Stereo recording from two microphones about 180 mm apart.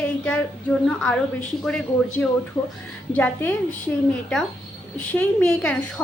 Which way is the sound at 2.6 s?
20° left (ahead or behind).